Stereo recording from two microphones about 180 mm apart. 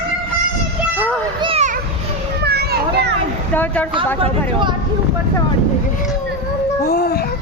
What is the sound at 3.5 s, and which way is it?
Speech, 10° left (ahead or behind).